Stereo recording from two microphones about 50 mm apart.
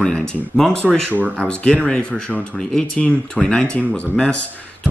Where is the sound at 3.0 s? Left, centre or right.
Left.